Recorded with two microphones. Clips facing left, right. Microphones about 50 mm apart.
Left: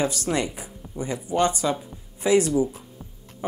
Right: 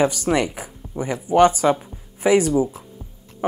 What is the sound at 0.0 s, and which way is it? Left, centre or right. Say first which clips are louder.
Speech: right 6 dB; right.